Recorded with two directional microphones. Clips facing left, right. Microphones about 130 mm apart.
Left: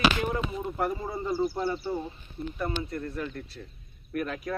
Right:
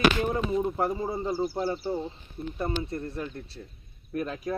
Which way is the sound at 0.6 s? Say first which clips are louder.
Right 3 dB; 25° right (ahead or behind).